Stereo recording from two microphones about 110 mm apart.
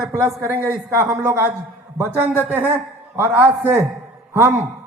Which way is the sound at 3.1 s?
20° right (ahead or behind).